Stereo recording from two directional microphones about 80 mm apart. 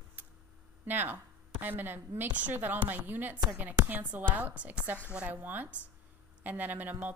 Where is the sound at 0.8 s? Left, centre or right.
Right.